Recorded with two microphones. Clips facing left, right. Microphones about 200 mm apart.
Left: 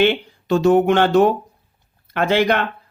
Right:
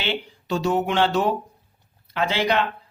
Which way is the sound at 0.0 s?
55° left (ahead or behind).